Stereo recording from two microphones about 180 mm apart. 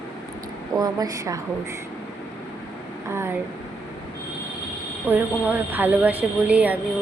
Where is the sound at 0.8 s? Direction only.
20° right (ahead or behind).